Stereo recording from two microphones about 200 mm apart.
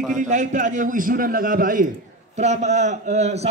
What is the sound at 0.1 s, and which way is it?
A man's voice, 40° right (ahead or behind).